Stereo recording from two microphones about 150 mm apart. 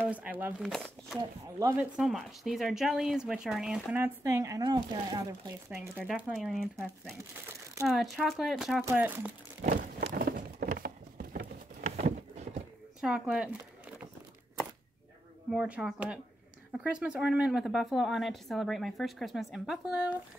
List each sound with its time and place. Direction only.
0.1 s speech: 10° right (ahead or behind)
0.6 s speech: centre (ahead or behind)
1.6 s speech: 15° right (ahead or behind)
2.0 s speech: centre (ahead or behind); by 5.5 s 30° right (ahead or behind)
5.7 s speech: 10° right (ahead or behind)
7.9 s speech: centre (ahead or behind)
8.8 s speech: 10° right (ahead or behind)
9.6 s a sound: 75° right (ahead or behind)
10.1 s a sound: 90° right; by 11.4 s 75° right (ahead or behind)
11.8 s a sound: 50° right (ahead or behind)
13.0 s speech: 5° right (ahead or behind)
15.5 s speech: 5° right (ahead or behind)